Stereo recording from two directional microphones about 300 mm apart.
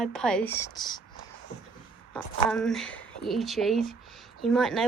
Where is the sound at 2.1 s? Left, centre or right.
Centre.